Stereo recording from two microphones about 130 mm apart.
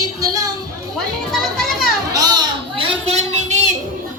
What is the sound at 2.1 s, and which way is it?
Children playing, 30° right (ahead or behind).